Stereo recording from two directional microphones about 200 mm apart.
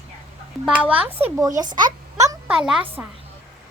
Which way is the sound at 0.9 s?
10° right (ahead or behind).